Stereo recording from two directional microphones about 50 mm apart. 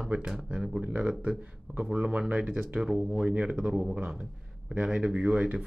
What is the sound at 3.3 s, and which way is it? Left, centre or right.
Speech, right.